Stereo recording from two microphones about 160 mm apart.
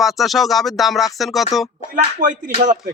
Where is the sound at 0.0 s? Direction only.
Centre (ahead or behind).